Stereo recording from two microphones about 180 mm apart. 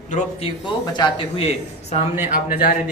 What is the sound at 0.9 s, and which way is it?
Speech, 25° left (ahead or behind).